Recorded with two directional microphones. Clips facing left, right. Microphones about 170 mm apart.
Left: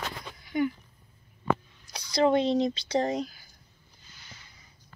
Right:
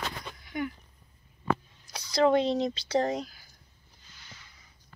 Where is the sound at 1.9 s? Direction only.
Centre (ahead or behind).